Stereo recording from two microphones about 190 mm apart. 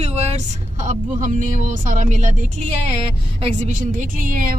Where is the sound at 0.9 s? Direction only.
40° right (ahead or behind).